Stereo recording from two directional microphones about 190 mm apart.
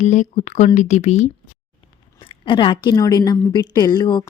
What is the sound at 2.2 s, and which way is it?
A woman's voice, 25° left (ahead or behind).